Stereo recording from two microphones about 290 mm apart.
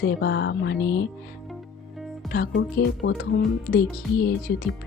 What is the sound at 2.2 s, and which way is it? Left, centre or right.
Speech, left.